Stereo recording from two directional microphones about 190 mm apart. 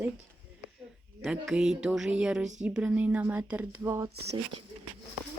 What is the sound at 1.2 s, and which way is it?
Speech, 5° right (ahead or behind).